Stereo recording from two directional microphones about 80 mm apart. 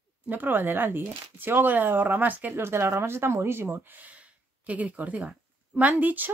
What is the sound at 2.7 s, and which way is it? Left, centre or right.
Speech, right.